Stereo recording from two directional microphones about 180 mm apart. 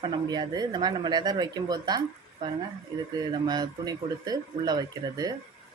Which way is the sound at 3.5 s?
20° right (ahead or behind).